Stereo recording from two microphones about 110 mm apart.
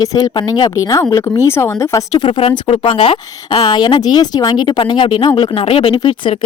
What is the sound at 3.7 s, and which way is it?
Speech, 45° left (ahead or behind).